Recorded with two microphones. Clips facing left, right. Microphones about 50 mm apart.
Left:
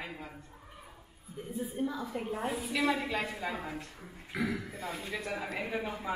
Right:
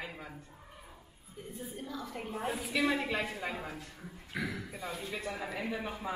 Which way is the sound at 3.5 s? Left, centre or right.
Left.